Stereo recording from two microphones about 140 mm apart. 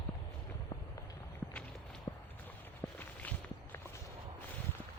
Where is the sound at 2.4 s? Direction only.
15° left (ahead or behind).